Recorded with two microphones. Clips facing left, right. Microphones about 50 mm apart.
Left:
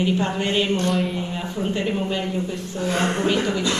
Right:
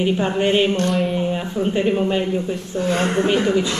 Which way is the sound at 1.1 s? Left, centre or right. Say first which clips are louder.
Right 6 dB; centre.